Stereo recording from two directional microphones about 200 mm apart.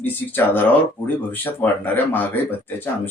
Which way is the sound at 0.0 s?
10° left (ahead or behind).